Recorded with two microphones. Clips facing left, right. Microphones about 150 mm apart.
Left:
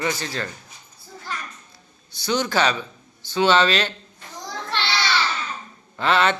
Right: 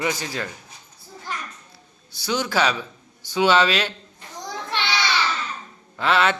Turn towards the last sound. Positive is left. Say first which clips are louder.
# even
turn(degrees=-5)  # may be behind; listen again after turning